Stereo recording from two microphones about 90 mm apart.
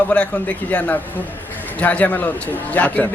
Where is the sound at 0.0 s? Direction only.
15° left (ahead or behind).